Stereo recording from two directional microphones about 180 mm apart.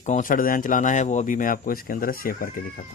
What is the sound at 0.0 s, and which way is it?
Speech, 45° left (ahead or behind).